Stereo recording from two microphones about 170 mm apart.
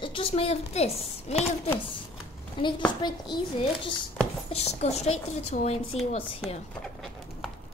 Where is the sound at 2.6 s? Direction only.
30° left (ahead or behind).